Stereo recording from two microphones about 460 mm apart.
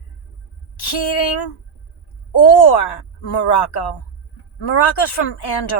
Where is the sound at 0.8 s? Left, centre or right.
Left.